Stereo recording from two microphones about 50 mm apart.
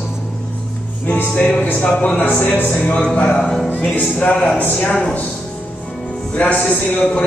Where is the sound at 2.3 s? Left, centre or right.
Left.